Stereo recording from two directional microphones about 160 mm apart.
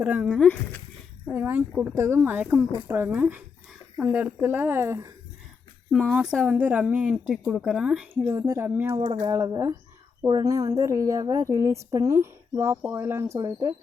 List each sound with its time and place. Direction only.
0.0 s speech: 10° right (ahead or behind)
0.3 s speech: 10° left (ahead or behind)
1.3 s speech: 10° right (ahead or behind)
5.9 s a woman's voice: 5° right (ahead or behind)
8.3 s speech: 20° right (ahead or behind)
9.0 s speech: 35° right (ahead or behind)
9.3 s speech: 20° right (ahead or behind)